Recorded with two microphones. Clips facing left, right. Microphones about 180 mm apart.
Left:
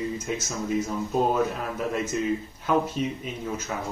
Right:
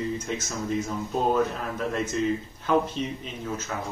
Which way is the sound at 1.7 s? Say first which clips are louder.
Right 1 dB; 10° left (ahead or behind).